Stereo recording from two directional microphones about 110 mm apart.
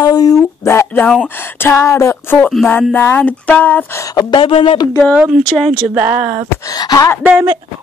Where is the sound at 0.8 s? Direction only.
15° left (ahead or behind).